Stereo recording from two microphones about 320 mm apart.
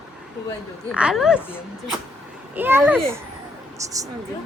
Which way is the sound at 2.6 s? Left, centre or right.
Centre.